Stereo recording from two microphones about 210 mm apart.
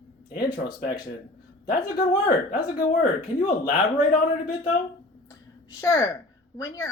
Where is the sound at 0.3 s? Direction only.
45° left (ahead or behind).